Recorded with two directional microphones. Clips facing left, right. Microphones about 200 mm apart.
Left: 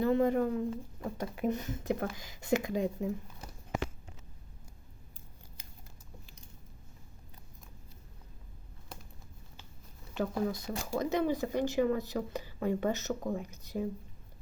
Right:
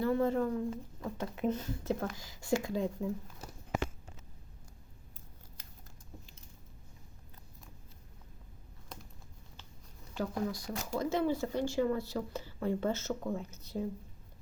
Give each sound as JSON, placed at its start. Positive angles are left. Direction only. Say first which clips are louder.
{"t": 0.0, "sound": "speech", "louder": "left 2 dB", "side_deg": 15}
{"t": 10.2, "sound": "speech", "louder": "left 3 dB", "side_deg": 20}